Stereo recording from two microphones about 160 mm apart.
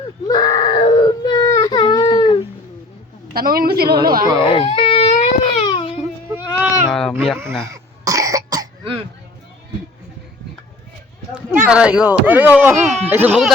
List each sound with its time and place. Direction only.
0.3 s baby cry: 25° left (ahead or behind)
3.3 s speech: 65° right (ahead or behind)
4.4 s baby cry: 35° left (ahead or behind)
6.4 s sheep: 25° left (ahead or behind)
6.9 s speech: 5° left (ahead or behind)
7.6 s cough: 20° right (ahead or behind)
11.5 s speech: 5° right (ahead or behind)
12.7 s speech: 45° right (ahead or behind)
13.1 s speech: 15° right (ahead or behind)